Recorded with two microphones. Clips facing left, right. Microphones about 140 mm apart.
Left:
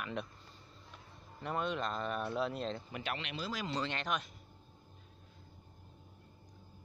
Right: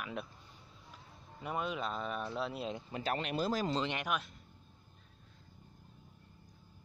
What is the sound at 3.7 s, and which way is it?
Speech, 15° right (ahead or behind).